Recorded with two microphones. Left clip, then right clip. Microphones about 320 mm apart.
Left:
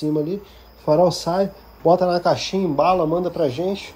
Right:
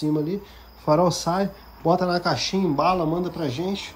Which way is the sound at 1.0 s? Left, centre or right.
Right.